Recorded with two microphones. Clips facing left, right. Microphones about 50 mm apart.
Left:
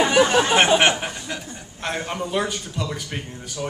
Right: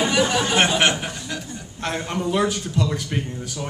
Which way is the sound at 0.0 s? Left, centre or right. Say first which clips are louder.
Left 3 dB; left.